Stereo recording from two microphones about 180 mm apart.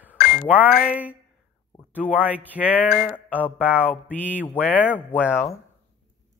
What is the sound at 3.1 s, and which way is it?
Mantra, 10° left (ahead or behind).